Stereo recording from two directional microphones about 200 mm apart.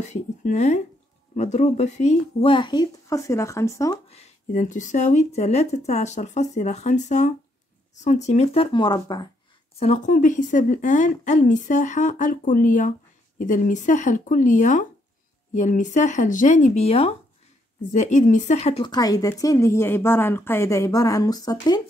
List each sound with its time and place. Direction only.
0.1 s a woman's voice: 35° left (ahead or behind); by 4.0 s 15° left (ahead or behind)
4.1 s speech: 35° left (ahead or behind); by 9.3 s 20° left (ahead or behind)
9.8 s speech: 35° left (ahead or behind)
18.9 s a woman's voice: 20° left (ahead or behind)